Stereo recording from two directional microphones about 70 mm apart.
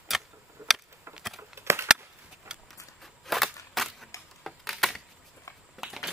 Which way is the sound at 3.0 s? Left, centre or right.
Centre.